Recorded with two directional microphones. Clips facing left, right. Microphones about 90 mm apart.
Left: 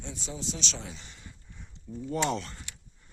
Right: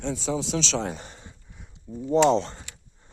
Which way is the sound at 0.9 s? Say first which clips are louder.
Right 9 dB; 45° right (ahead or behind).